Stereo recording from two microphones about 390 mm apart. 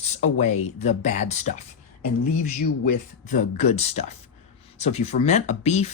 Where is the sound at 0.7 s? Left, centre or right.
Centre.